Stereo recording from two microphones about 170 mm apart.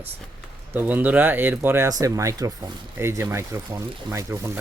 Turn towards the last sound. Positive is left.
turn(degrees=-15)  # may be behind; listen again after turning